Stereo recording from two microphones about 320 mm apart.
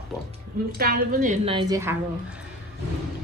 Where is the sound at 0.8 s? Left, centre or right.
Right; by 1.9 s centre.